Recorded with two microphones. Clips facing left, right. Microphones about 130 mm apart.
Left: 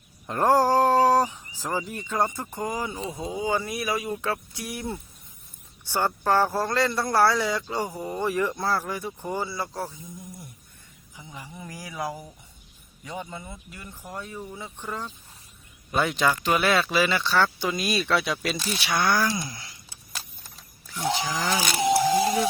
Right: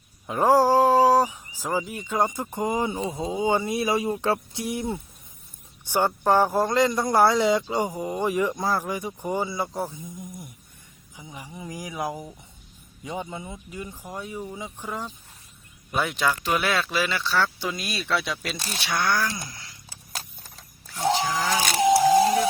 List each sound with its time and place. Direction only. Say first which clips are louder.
0.3 s speech: right 2 dB; 5° right (ahead or behind); by 19.5 s 10° left (ahead or behind)
21.6 s vehicle: right 4 dB; 55° right (ahead or behind)